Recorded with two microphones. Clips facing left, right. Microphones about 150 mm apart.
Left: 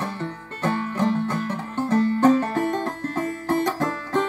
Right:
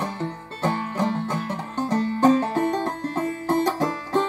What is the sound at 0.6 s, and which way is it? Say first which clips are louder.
Music: left 1 dB; 10° right (ahead or behind).